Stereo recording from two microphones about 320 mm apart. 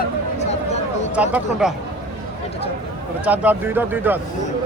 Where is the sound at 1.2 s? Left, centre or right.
Centre.